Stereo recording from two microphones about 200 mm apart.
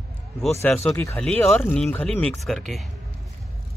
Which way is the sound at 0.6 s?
10° left (ahead or behind).